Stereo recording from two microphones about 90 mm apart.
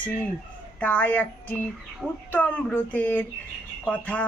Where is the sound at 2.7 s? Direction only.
20° left (ahead or behind).